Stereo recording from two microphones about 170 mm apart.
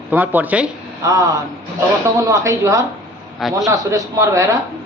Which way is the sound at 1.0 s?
20° right (ahead or behind).